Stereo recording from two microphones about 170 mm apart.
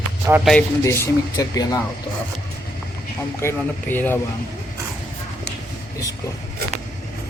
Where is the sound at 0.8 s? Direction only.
15° left (ahead or behind).